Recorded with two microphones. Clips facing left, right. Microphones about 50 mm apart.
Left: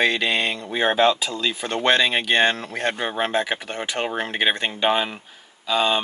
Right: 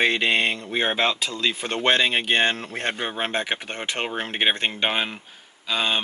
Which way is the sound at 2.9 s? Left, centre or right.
Centre.